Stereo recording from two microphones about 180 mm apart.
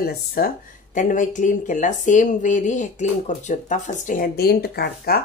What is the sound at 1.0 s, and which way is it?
Speech, 45° left (ahead or behind).